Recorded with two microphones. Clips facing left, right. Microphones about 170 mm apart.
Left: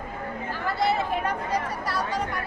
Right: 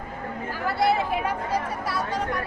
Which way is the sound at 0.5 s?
10° right (ahead or behind).